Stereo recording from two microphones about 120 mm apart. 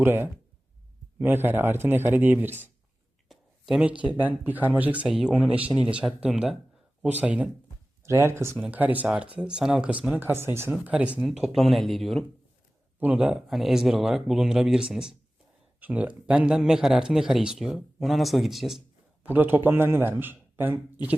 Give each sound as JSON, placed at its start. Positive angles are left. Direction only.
{"t": 0.0, "sound": "speech", "side_deg": -20}
{"t": 3.2, "sound": "a sound", "side_deg": -5}
{"t": 4.2, "sound": "speech", "side_deg": -15}
{"t": 8.0, "sound": "speech", "side_deg": -20}
{"t": 13.0, "sound": "speech", "side_deg": -10}
{"t": 19.2, "sound": "speech", "side_deg": -15}